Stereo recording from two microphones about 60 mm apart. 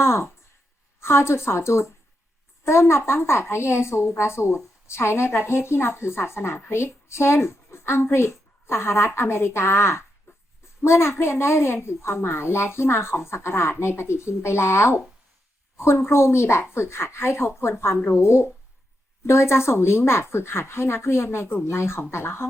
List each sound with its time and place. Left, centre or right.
0.0 s a woman's voice: left
10.3 s dog: left
10.8 s a woman's voice: left